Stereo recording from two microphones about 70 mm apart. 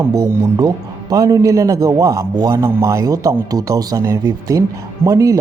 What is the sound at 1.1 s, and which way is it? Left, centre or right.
Speech, right.